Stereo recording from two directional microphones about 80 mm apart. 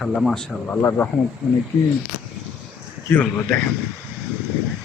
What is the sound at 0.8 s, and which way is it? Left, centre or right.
Speech, left.